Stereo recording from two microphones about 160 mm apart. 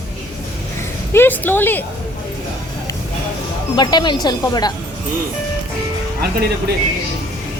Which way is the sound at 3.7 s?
25° left (ahead or behind).